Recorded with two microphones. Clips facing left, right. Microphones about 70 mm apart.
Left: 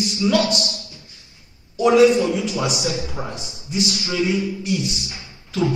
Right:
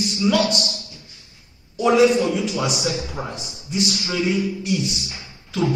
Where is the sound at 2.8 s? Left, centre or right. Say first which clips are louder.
Even; right.